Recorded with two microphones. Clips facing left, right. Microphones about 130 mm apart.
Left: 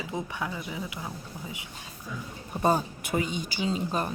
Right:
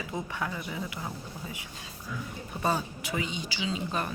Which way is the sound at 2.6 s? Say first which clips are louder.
Left 5 dB; 45° left (ahead or behind).